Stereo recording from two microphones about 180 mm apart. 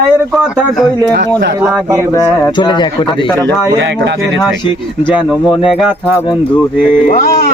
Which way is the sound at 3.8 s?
75° right (ahead or behind).